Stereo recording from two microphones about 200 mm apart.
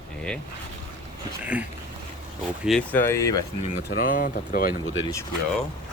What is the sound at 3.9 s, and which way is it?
Speech, 45° left (ahead or behind).